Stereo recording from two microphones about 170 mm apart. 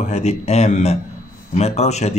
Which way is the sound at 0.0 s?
40° left (ahead or behind).